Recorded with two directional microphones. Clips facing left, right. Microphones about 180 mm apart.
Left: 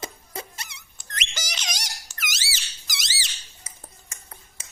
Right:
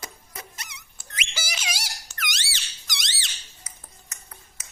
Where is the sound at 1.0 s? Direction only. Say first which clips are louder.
Even; 10° right (ahead or behind).